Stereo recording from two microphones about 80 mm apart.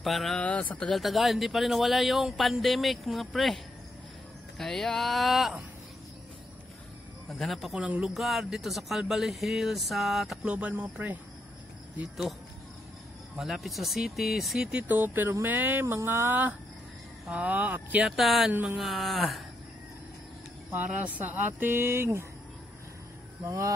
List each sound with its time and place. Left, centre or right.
0.0 s speech: centre
0.4 s speech: centre
0.9 s speech: centre
7.2 s speech: centre
10.4 s speech: centre
13.4 s speech: centre
14.8 s speech: right
18.0 s speech: centre
18.5 s speech: right
18.8 s speech: centre
20.7 s speech: right
23.4 s a sound: right